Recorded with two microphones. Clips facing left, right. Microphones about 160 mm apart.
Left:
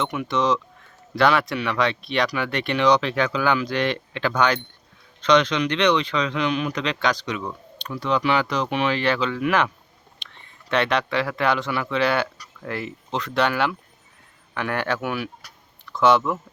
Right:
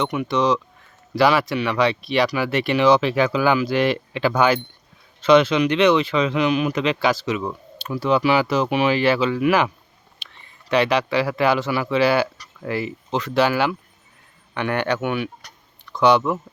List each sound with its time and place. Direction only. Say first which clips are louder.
0.0 s speech: right 3 dB; centre (ahead or behind)